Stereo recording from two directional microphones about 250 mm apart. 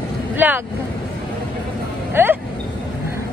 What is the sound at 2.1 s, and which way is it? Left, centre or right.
Vehicle, centre.